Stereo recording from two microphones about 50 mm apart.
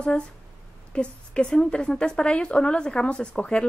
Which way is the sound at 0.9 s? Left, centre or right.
Centre.